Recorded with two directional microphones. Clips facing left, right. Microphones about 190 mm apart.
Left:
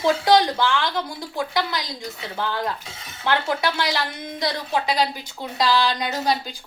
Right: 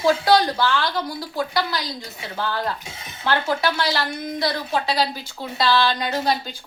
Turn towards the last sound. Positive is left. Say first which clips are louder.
# right 1 dB
turn(degrees=15)  # may be behind; listen again after turning